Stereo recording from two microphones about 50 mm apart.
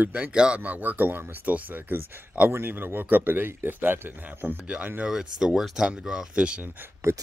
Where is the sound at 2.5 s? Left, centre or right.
Right.